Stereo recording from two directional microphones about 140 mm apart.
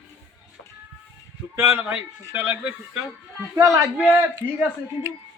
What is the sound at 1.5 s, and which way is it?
A man's voice, 15° right (ahead or behind).